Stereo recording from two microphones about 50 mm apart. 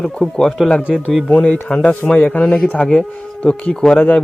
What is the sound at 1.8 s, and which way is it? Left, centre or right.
A man's voice, left.